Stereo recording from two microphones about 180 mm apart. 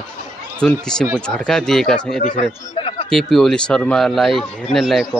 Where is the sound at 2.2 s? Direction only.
45° left (ahead or behind).